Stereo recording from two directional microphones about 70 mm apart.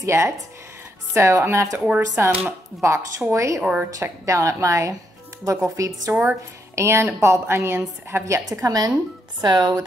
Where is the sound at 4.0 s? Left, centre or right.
Right.